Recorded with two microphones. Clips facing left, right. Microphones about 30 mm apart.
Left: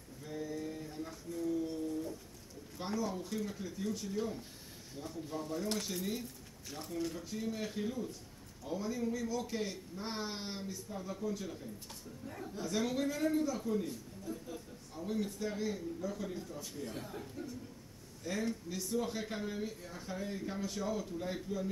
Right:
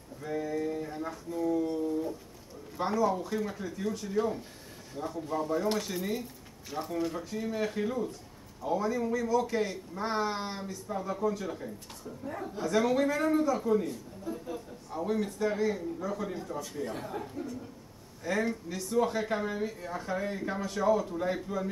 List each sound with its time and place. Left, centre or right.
0.4 s mantra: right
1.7 s a sound: right
2.8 s a man's voice: centre
12.3 s a woman's voice: right
12.6 s a man's voice: centre
20.6 s a man's voice: centre